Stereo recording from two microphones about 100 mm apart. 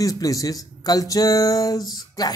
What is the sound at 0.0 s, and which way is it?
Speech, 35° left (ahead or behind).